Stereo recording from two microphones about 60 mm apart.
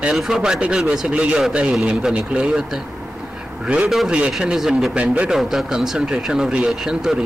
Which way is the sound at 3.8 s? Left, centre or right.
Centre.